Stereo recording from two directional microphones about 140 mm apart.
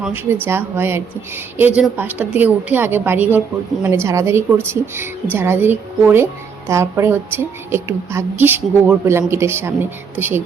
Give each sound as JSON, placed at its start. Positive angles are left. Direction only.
{"t": 0.0, "sound": "a woman's voice", "side_deg": -15}